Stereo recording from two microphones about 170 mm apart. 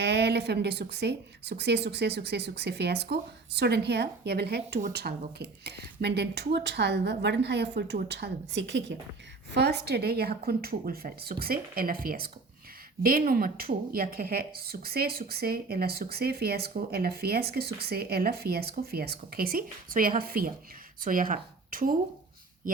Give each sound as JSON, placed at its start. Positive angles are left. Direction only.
{"t": 0.0, "sound": "a woman's voice", "side_deg": -80}
{"t": 9.5, "sound": "a woman's voice", "side_deg": -75}